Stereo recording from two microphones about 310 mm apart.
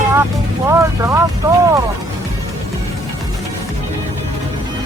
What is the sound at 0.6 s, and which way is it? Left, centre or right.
Speech, centre.